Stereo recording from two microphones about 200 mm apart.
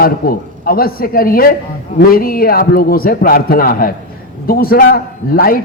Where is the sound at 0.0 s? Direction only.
45° left (ahead or behind).